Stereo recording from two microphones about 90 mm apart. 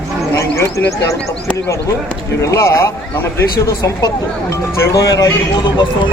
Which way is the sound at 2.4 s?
35° left (ahead or behind).